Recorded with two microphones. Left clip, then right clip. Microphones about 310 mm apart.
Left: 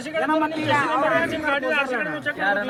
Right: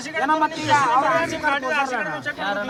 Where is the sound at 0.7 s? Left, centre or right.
Right.